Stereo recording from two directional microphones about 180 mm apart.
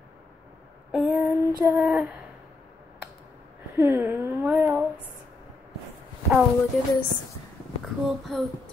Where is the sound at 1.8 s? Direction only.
5° right (ahead or behind).